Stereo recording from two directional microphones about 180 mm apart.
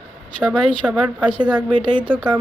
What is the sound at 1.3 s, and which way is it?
Speech, 25° right (ahead or behind).